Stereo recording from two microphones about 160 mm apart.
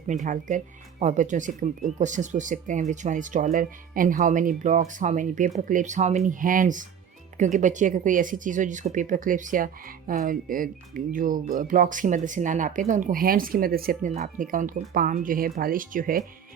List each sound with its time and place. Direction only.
0.3 s speech: 50° right (ahead or behind); by 14.1 s 65° right (ahead or behind)
14.1 s speech: 50° right (ahead or behind)